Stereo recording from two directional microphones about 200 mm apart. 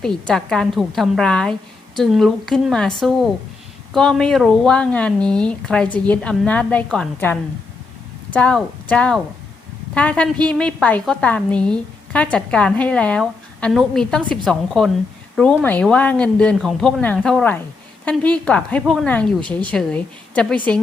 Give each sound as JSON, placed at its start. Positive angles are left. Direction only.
{"t": 0.0, "sound": "a woman's voice", "side_deg": 5}